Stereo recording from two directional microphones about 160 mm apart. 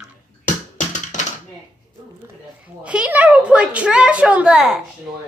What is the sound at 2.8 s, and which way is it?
A woman's voice, 10° right (ahead or behind).